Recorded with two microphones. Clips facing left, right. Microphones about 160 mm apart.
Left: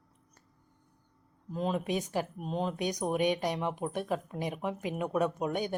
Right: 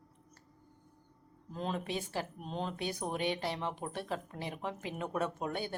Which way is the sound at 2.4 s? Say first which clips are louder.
Left 5 dB; 5° left (ahead or behind).